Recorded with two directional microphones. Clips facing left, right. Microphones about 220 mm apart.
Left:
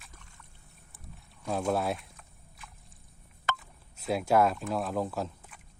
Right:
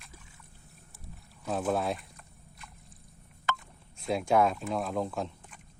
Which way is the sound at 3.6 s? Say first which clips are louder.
Right 2 dB; centre (ahead or behind).